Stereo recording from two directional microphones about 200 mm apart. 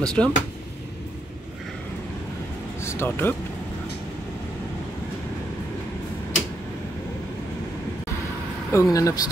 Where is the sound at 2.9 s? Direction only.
10° left (ahead or behind).